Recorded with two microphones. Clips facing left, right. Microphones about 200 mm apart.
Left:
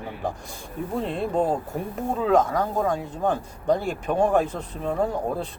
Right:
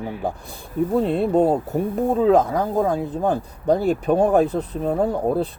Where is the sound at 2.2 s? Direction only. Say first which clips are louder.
Right 2 dB; 35° right (ahead or behind).